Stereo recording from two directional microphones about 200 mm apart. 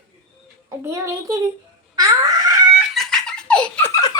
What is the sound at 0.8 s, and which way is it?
Speech, 15° right (ahead or behind).